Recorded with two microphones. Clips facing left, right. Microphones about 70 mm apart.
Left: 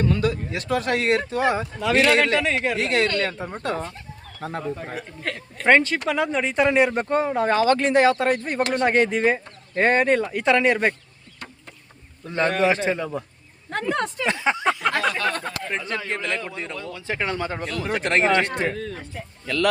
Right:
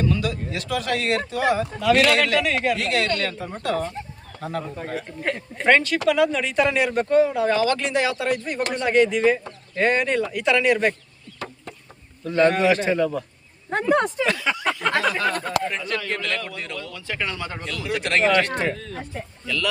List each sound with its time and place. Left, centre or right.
0.0 s speech: left
5.2 s speech: centre
5.6 s speech: left
12.2 s speech: left
13.7 s speech: centre
14.3 s speech: left
14.9 s a sound: centre
15.7 s speech: left
18.7 s a sound: centre